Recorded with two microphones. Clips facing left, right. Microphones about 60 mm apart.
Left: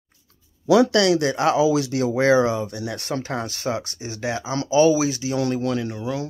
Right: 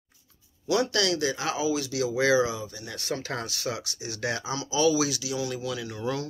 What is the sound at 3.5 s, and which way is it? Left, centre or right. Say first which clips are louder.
Speech: left 6 dB; left.